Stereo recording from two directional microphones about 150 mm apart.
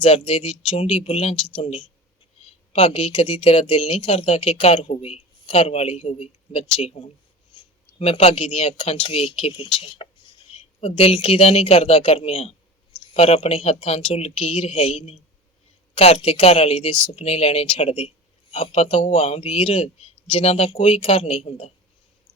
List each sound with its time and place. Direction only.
0.0 s speech: 40° left (ahead or behind)
7.5 s a sound: 35° left (ahead or behind)
7.9 s speech: 45° left (ahead or behind)